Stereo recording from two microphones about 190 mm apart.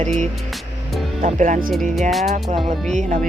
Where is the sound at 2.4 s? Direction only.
30° right (ahead or behind).